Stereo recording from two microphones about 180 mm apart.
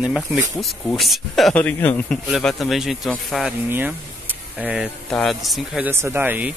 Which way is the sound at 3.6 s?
10° right (ahead or behind).